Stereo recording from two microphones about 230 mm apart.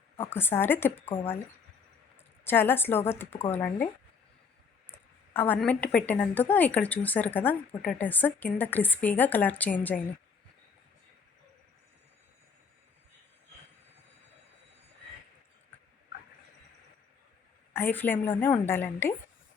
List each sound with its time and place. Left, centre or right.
0.2 s speech: centre
2.1 s speech: centre
4.9 s a sound: centre
6.1 s speech: centre
17.7 s speech: centre